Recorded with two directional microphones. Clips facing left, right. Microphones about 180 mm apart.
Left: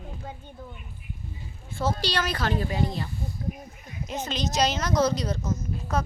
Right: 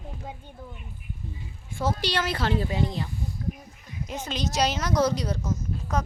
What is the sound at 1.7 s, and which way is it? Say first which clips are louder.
Speech: even; 20° right (ahead or behind).